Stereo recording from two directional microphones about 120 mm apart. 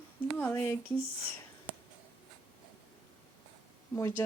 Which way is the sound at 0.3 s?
20° left (ahead or behind).